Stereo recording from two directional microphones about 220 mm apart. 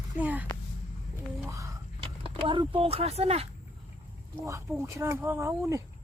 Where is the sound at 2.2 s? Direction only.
25° right (ahead or behind).